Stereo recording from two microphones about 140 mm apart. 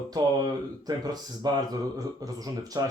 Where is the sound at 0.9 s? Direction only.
30° right (ahead or behind).